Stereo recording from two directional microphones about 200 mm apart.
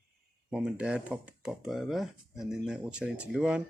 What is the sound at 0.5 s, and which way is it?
Speech, 5° right (ahead or behind).